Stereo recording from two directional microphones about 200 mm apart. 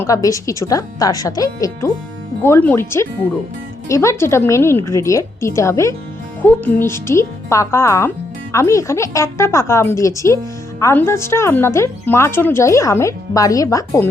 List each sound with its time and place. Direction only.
0.0 s a woman's voice: 15° left (ahead or behind)